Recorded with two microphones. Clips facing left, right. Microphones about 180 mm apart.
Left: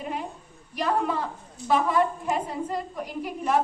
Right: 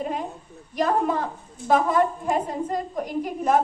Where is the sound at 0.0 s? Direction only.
40° right (ahead or behind).